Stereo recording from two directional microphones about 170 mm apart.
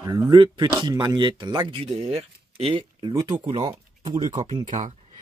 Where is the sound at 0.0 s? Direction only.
25° right (ahead or behind).